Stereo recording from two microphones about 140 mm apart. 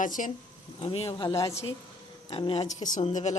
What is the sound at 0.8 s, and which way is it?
Speech, 45° left (ahead or behind).